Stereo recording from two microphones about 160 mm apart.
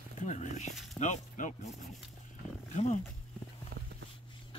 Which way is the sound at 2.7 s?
45° left (ahead or behind).